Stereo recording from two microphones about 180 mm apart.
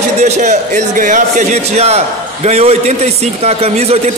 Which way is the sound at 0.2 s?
40° right (ahead or behind).